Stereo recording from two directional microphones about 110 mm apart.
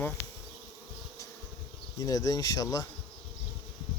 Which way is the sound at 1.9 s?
35° left (ahead or behind).